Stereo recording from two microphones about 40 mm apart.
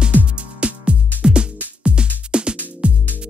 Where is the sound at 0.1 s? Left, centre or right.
Right.